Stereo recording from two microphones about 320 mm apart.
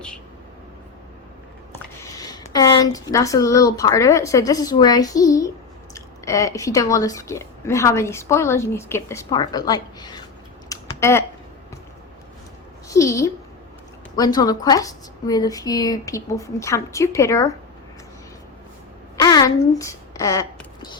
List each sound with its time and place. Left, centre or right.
2.0 s speech: centre
10.7 s a sound: centre
12.9 s a woman's voice: centre
19.1 s speech: centre